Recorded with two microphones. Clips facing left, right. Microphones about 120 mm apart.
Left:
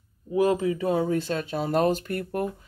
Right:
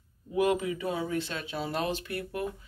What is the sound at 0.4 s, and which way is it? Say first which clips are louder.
Speech: left 4 dB; 35° left (ahead or behind).